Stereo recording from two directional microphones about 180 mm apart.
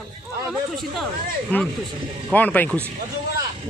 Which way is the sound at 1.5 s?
10° left (ahead or behind).